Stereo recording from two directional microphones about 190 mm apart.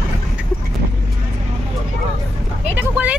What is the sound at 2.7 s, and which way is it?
Vehicle, 10° right (ahead or behind).